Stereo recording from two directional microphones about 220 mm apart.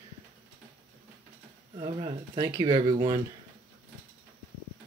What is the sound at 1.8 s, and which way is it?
Speech, 20° right (ahead or behind).